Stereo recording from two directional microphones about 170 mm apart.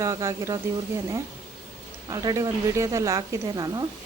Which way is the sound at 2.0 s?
20° right (ahead or behind).